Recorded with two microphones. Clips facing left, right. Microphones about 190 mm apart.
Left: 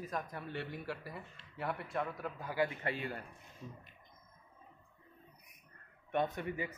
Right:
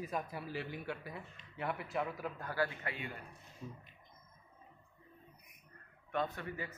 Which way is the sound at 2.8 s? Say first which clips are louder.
Left 5 dB; 40° left (ahead or behind).